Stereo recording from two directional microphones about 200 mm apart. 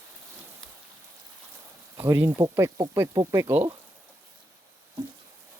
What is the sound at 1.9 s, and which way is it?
Speech, 15° right (ahead or behind).